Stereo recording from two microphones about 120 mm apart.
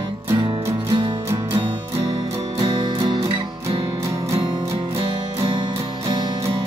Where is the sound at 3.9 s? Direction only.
25° right (ahead or behind).